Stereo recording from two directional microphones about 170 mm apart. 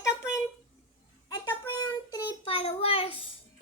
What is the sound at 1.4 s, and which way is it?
Child singing, 25° left (ahead or behind).